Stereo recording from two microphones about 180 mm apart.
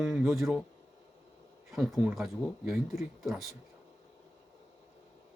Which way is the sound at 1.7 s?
Centre (ahead or behind).